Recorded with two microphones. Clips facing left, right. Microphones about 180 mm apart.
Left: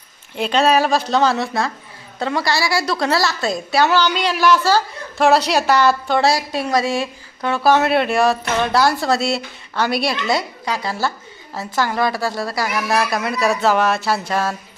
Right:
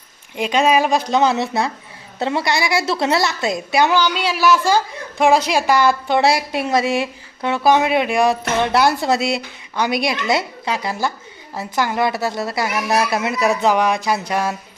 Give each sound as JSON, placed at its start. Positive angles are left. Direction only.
{"t": 0.3, "sound": "a woman's voice", "side_deg": -10}